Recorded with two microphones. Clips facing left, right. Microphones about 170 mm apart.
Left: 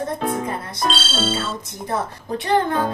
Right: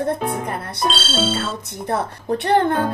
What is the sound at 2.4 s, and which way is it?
Speech, 65° right (ahead or behind).